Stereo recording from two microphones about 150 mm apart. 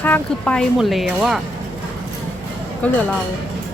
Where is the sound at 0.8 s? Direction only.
Centre (ahead or behind).